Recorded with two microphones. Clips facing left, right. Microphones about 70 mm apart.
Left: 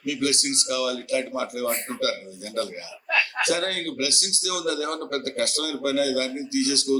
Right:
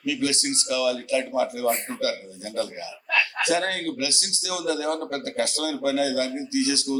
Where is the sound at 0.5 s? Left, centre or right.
Right.